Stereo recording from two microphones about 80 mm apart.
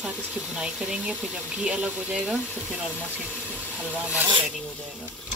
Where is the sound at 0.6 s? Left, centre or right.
Centre.